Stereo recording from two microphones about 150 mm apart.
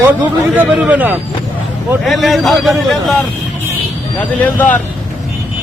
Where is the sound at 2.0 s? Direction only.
Centre (ahead or behind).